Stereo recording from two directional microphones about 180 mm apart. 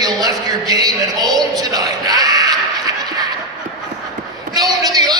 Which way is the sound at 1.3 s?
20° right (ahead or behind).